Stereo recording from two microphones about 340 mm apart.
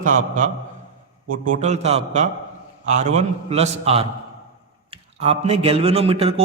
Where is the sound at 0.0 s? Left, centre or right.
Right.